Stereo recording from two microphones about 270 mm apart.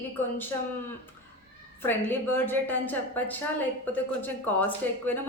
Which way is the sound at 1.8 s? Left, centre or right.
Centre.